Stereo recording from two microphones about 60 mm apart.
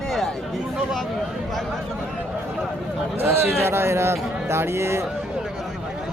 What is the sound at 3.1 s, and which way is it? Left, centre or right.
A man's voice, right.